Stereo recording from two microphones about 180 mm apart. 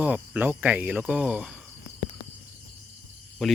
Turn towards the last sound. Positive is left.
turn(degrees=0)  # may be behind; listen again after turning